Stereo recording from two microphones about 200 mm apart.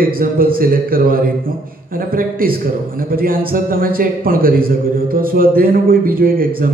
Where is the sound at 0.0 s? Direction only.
45° right (ahead or behind).